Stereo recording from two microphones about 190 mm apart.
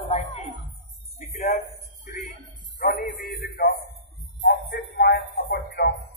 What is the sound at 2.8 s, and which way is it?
Speech, 50° left (ahead or behind).